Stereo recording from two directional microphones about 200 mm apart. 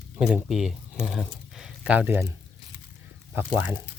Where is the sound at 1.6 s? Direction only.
5° right (ahead or behind).